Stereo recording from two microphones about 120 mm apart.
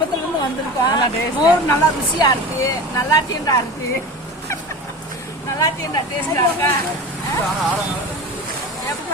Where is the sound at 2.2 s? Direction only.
30° left (ahead or behind).